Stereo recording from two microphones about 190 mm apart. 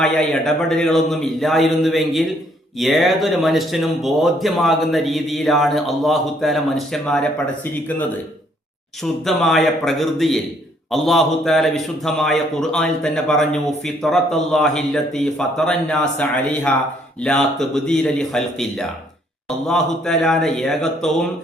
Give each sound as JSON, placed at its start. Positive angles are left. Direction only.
{"t": 0.0, "sound": "speech", "side_deg": 5}
{"t": 9.2, "sound": "speech", "side_deg": 0}